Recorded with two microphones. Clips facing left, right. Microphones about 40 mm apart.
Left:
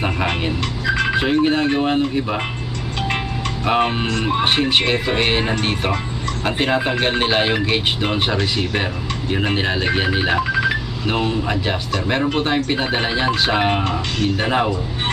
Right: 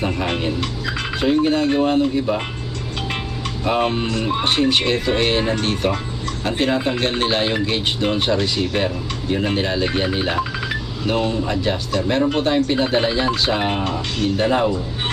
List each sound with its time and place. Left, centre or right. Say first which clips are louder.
0.6 s music: left 5 dB; centre
1.2 s speech: right 4 dB; left
3.7 s speech: left 1 dB; left